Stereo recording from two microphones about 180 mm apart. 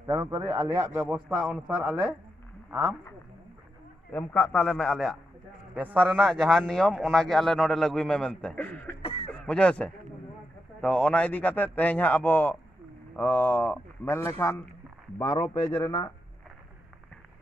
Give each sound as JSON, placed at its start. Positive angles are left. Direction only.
{"t": 0.0, "sound": "a man's voice", "side_deg": -20}
{"t": 4.1, "sound": "a man's voice", "side_deg": 10}
{"t": 5.8, "sound": "a man's voice", "side_deg": -10}
{"t": 9.0, "sound": "a sound", "side_deg": 30}
{"t": 9.3, "sound": "a man's voice", "side_deg": 5}